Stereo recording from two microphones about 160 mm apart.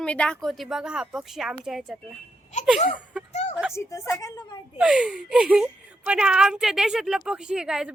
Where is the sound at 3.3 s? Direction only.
45° left (ahead or behind).